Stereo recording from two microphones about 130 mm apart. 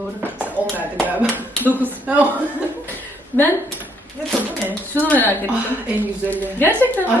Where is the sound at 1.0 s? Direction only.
10° right (ahead or behind).